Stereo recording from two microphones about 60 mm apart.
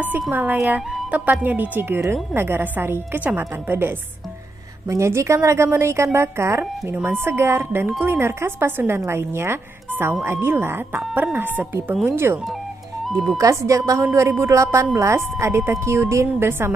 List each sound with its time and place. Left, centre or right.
0.3 s a woman's voice: right
4.8 s a woman's voice: right
13.4 s speech: right
14.1 s a woman's voice: right